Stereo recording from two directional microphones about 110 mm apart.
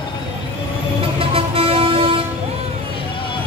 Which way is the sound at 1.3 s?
60° right (ahead or behind).